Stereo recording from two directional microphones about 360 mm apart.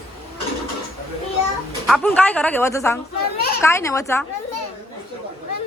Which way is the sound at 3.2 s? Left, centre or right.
Left.